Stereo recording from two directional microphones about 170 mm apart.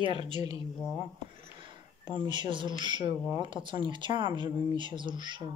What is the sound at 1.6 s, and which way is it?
Speech, 25° right (ahead or behind).